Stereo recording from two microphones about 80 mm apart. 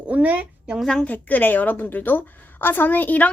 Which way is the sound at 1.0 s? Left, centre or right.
Left.